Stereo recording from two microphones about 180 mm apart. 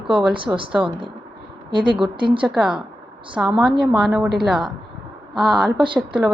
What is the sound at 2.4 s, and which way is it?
A woman's voice, 5° right (ahead or behind).